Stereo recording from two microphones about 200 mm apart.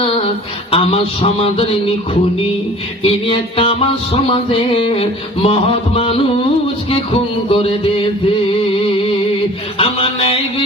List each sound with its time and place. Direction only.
0.7 s music: 30° left (ahead or behind)
3.0 s music: 25° left (ahead or behind)
9.7 s music: 30° left (ahead or behind)